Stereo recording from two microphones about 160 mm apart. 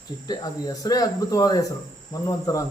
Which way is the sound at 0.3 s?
25° left (ahead or behind).